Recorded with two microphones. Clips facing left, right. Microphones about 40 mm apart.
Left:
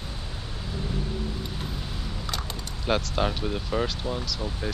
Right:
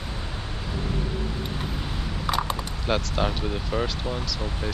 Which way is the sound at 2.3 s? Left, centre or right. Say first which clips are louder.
Right 9 dB; right.